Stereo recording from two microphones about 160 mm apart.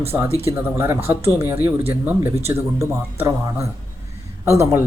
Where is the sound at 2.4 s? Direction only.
40° right (ahead or behind).